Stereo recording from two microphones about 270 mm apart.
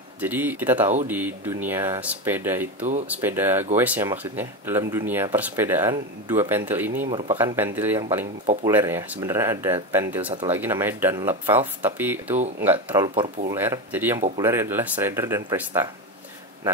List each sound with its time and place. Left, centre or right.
0.2 s speech: centre
7.1 s speech: centre
7.3 s speech: centre
13.6 s speech: centre